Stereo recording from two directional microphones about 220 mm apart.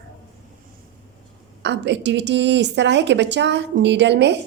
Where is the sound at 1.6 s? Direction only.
50° right (ahead or behind).